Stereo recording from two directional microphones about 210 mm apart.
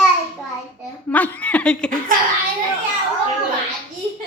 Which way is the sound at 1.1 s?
5° left (ahead or behind).